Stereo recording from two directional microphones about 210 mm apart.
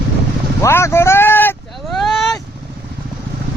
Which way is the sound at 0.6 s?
10° left (ahead or behind).